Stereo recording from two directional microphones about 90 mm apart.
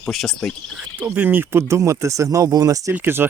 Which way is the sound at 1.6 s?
35° right (ahead or behind).